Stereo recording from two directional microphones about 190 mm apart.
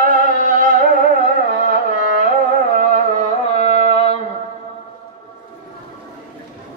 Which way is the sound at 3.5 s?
35° left (ahead or behind).